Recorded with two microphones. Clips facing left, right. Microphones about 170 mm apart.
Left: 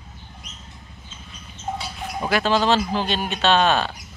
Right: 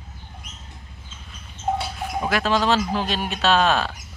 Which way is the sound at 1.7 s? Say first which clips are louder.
Right 5 dB; 60° right (ahead or behind).